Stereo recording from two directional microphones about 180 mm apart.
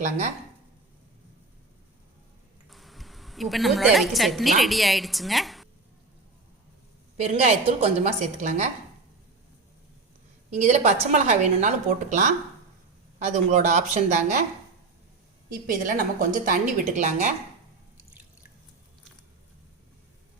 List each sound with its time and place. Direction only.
2.6 s a woman's voice: centre (ahead or behind)
7.2 s a woman's voice: 35° right (ahead or behind)
10.5 s a woman's voice: 40° right (ahead or behind)
15.4 s a woman's voice: 50° right (ahead or behind)